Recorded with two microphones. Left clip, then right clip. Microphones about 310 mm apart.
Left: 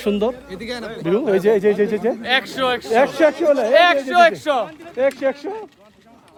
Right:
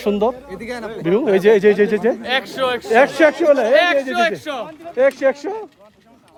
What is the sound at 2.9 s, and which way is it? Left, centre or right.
Speech, right.